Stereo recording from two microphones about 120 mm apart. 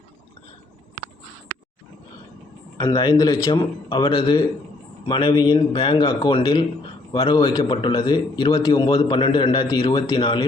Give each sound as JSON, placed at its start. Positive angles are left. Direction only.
{"t": 2.7, "sound": "a man's voice", "side_deg": 30}
{"t": 8.7, "sound": "a man's voice", "side_deg": 45}